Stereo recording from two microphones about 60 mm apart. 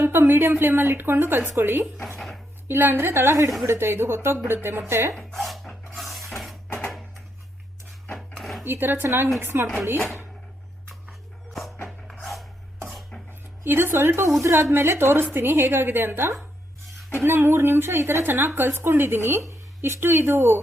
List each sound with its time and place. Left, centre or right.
0.0 s speech: right
2.1 s dishes: centre
2.6 s speech: right
5.1 s a sound: centre
8.4 s a sound: centre
8.6 s speech: right
12.2 s filing: centre
13.7 s speech: right
14.4 s speech: right
14.7 s speech: right